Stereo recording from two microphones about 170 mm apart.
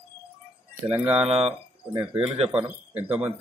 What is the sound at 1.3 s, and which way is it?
Speech, 35° right (ahead or behind).